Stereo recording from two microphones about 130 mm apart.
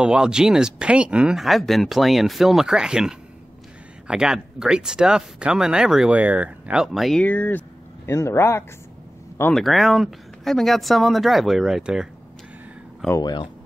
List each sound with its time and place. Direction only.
0.0 s speech: 5° right (ahead or behind)
7.2 s speech: 15° left (ahead or behind)
9.5 s speech: centre (ahead or behind)
13.2 s speech: 35° left (ahead or behind)